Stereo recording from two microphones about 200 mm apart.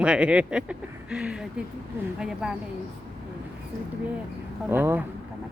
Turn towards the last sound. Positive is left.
turn(degrees=-10)  # may be behind; listen again after turning